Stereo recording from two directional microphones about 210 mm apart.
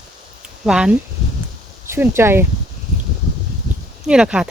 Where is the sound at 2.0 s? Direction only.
10° right (ahead or behind).